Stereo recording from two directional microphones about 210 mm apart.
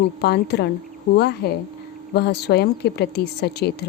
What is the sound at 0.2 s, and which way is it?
A woman's voice, 50° left (ahead or behind).